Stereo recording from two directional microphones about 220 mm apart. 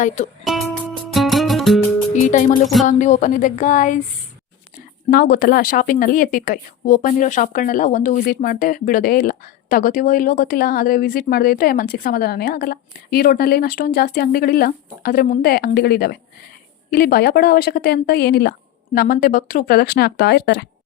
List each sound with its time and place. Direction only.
0.4 s speech: centre (ahead or behind)
1.1 s music: centre (ahead or behind)
2.2 s speech: 35° left (ahead or behind)
5.1 s speech: 40° left (ahead or behind)